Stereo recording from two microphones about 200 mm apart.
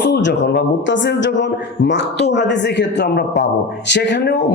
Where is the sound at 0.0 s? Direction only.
60° left (ahead or behind).